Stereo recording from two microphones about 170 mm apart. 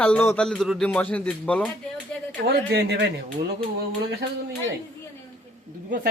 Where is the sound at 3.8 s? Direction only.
65° right (ahead or behind).